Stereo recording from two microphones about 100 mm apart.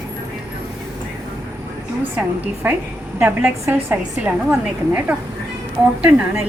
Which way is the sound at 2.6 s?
20° right (ahead or behind).